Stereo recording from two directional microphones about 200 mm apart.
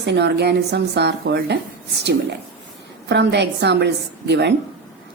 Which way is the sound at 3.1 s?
60° right (ahead or behind).